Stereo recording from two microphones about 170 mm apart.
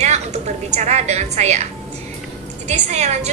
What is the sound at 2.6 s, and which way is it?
Speech, 40° right (ahead or behind).